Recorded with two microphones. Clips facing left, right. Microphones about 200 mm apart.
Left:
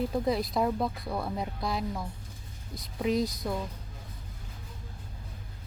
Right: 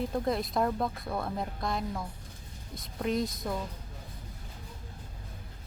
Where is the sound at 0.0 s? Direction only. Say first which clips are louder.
Left 2 dB; centre (ahead or behind).